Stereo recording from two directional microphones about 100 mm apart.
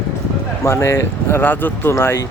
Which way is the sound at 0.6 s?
30° left (ahead or behind).